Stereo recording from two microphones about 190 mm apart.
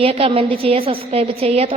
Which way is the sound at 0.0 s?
30° right (ahead or behind).